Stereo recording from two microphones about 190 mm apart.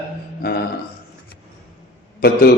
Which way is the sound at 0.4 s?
55° left (ahead or behind).